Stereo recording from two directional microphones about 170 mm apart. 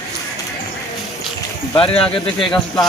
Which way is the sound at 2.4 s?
Centre (ahead or behind).